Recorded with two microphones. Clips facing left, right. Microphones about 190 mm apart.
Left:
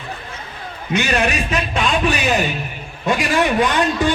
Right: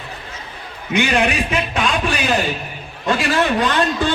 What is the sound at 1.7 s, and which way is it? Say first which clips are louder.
Speech: left 3 dB; centre (ahead or behind).